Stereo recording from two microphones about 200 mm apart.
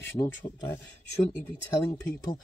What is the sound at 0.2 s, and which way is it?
Speech, 20° left (ahead or behind).